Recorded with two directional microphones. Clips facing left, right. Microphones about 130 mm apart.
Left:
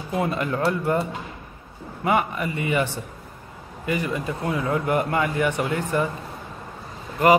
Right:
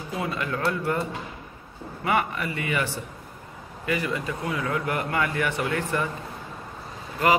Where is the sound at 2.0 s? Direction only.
20° left (ahead or behind).